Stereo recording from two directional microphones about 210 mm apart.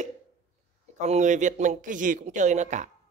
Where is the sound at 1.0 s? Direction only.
35° right (ahead or behind).